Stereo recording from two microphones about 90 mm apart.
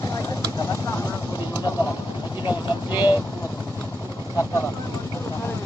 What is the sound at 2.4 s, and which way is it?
Vehicle, 55° left (ahead or behind).